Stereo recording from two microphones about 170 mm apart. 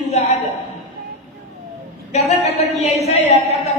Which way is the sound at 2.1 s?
40° left (ahead or behind).